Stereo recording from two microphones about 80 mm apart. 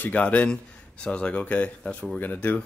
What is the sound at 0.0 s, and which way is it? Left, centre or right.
Speech, centre.